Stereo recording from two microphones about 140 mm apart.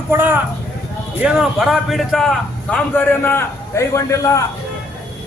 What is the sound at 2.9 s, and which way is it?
A man's voice, 15° left (ahead or behind).